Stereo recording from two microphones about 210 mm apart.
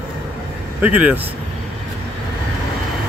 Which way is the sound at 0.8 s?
5° right (ahead or behind).